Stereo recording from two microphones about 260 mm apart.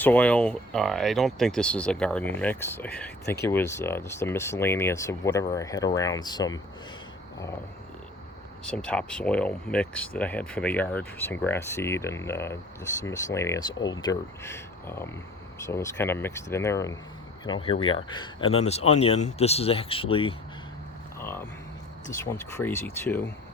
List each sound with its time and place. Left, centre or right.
0.0 s speech: centre
8.6 s speech: centre
21.2 s speech: centre